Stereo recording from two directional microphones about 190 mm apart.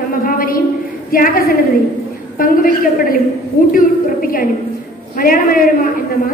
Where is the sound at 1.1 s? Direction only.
50° left (ahead or behind).